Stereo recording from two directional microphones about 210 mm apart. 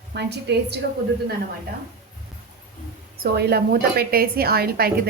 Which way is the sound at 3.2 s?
50° right (ahead or behind).